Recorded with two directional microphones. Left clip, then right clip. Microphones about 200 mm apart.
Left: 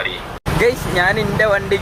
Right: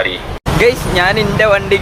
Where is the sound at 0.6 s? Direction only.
Centre (ahead or behind).